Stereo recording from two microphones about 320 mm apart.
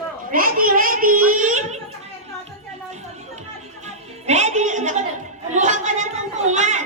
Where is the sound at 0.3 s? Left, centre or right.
Right.